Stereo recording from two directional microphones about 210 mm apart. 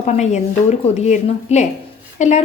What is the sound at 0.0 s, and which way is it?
A woman's voice, 35° left (ahead or behind).